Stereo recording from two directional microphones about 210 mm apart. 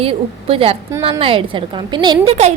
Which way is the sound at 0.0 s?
25° right (ahead or behind).